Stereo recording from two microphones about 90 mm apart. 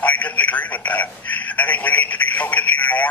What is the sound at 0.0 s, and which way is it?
Speech, 15° left (ahead or behind).